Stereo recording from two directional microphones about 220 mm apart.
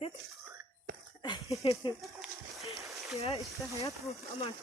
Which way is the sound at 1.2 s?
20° left (ahead or behind).